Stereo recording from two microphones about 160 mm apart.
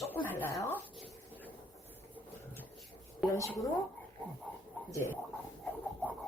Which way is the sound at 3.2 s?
20° left (ahead or behind).